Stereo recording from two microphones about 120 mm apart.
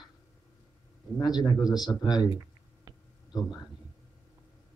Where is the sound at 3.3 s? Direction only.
35° left (ahead or behind).